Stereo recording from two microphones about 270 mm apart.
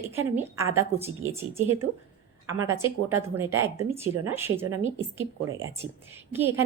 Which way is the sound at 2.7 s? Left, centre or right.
Centre.